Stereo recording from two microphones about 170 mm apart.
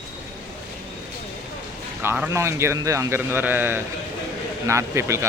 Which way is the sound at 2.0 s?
10° right (ahead or behind).